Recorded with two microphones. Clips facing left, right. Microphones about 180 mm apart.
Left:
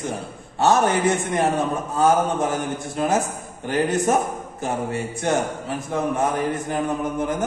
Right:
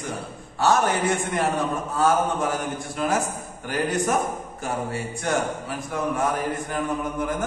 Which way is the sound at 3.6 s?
25° left (ahead or behind).